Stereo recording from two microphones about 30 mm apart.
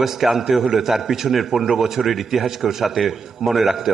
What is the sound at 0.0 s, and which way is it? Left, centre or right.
A man's voice, centre.